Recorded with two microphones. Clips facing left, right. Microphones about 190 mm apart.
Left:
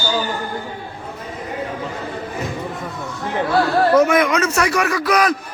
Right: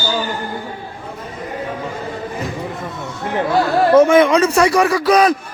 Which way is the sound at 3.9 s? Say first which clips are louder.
Right 7 dB; 25° right (ahead or behind).